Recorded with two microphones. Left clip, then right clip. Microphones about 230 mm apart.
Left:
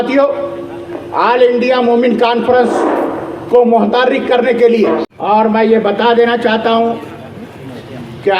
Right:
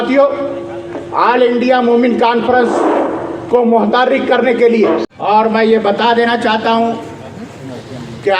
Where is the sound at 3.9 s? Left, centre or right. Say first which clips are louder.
Even; left.